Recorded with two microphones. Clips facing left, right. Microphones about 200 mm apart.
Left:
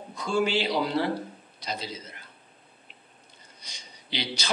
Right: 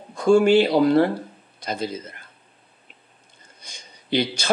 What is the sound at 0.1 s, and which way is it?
A man's voice, 50° right (ahead or behind).